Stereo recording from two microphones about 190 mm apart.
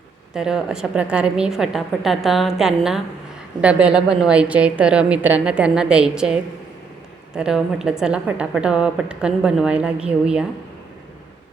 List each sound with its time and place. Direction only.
0.3 s a woman's voice: 5° right (ahead or behind)